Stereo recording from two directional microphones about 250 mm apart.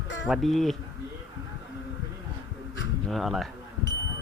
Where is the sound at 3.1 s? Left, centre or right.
Centre.